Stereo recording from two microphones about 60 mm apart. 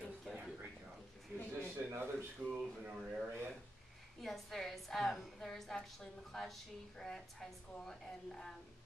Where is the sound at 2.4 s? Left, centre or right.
Right.